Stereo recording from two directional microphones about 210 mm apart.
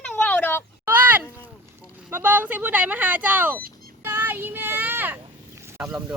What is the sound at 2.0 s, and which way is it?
Speech, 10° right (ahead or behind).